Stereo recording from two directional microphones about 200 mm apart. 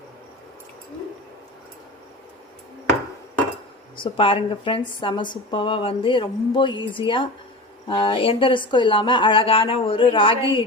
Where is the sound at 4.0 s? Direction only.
25° left (ahead or behind).